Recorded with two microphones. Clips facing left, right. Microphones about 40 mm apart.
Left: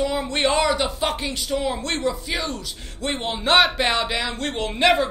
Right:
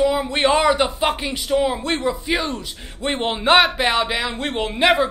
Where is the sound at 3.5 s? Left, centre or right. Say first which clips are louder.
Even; centre.